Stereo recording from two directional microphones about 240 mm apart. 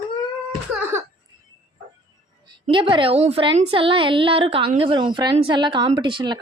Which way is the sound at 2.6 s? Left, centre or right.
Right.